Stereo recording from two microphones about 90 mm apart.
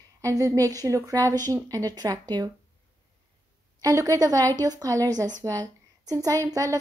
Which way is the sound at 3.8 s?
40° right (ahead or behind).